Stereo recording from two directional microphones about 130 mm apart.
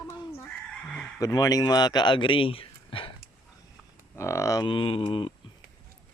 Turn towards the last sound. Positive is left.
turn(degrees=40)  # may be behind; listen again after turning